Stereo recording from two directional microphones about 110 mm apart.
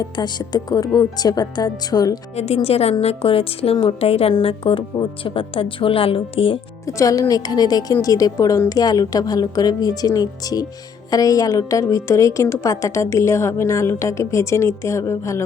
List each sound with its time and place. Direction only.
0.0 s speech: 40° left (ahead or behind)
2.3 s a woman's voice: 75° left (ahead or behind); by 6.6 s 55° left (ahead or behind)
6.8 s a woman's voice: 30° left (ahead or behind)